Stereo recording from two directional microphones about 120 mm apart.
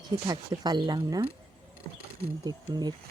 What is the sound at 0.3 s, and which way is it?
Speech, 35° right (ahead or behind).